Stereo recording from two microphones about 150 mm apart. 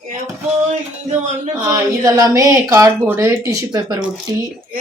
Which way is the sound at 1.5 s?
20° right (ahead or behind).